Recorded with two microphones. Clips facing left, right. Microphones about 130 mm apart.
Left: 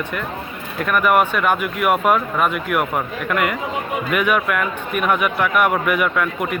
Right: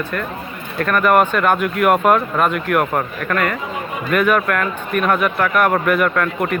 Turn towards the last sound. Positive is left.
turn(degrees=5)  # may be behind; listen again after turning